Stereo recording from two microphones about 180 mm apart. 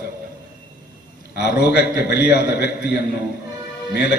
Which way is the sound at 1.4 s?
65° left (ahead or behind).